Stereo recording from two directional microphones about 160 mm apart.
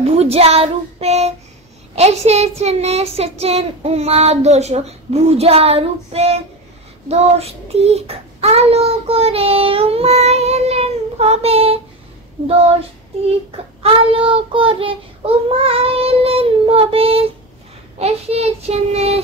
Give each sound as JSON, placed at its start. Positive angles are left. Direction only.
{"t": 0.0, "sound": "child singing", "side_deg": -40}
{"t": 13.8, "sound": "child singing", "side_deg": -35}